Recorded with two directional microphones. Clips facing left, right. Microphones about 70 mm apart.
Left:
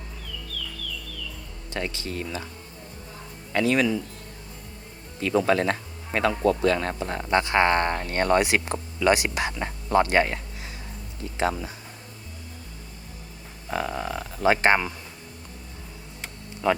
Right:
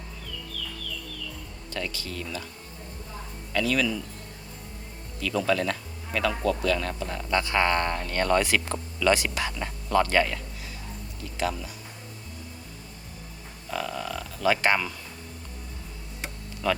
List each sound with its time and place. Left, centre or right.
1.7 s speech: left
3.5 s speech: left
5.2 s speech: left
13.7 s a sound: left
16.6 s speech: left